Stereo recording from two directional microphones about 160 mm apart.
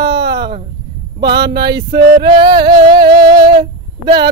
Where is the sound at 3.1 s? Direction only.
25° right (ahead or behind).